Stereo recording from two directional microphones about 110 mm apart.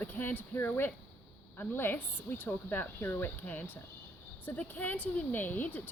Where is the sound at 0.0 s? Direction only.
20° left (ahead or behind).